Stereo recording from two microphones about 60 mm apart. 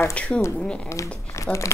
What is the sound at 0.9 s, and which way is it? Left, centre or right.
Speech, left.